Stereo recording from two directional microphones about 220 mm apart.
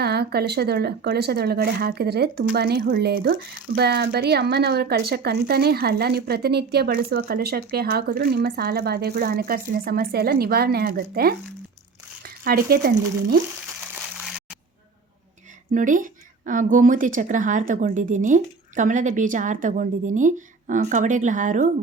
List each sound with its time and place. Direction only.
0.0 s speech: 45° right (ahead or behind)
12.5 s speech: 45° right (ahead or behind)
15.7 s speech: 35° right (ahead or behind)